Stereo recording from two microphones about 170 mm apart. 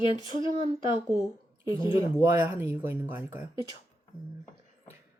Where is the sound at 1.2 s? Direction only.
20° right (ahead or behind).